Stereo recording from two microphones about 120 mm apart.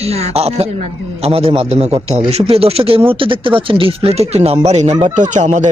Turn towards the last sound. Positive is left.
turn(degrees=-75)  # may be behind; listen again after turning